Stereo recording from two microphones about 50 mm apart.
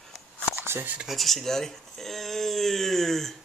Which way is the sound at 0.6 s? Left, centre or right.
Right.